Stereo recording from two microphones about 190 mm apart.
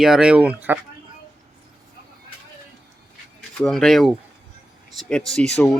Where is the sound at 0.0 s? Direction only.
5° right (ahead or behind).